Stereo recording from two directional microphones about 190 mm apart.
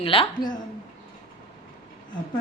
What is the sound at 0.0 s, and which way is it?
Speech, 30° left (ahead or behind).